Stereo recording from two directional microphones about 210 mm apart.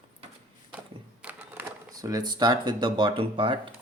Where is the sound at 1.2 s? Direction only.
10° right (ahead or behind); by 3.6 s 25° right (ahead or behind).